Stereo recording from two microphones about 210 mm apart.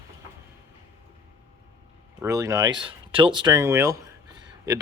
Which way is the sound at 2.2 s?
15° right (ahead or behind).